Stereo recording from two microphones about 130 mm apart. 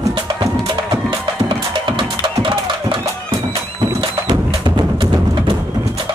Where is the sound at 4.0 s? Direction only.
40° right (ahead or behind).